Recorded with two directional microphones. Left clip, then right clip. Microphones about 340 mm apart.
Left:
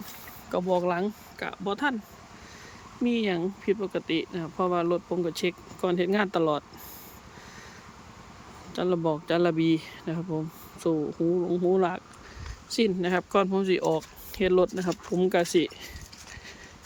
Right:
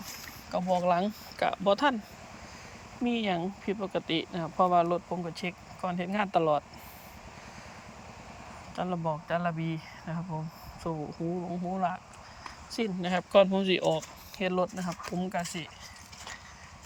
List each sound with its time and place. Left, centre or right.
0.5 s speech: centre
3.0 s speech: centre
8.7 s speech: centre